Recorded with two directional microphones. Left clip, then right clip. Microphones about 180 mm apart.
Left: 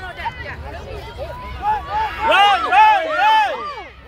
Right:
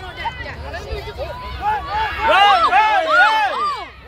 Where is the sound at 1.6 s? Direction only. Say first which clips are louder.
Even; 30° right (ahead or behind).